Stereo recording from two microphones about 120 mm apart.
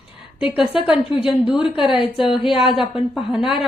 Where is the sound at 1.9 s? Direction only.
45° left (ahead or behind).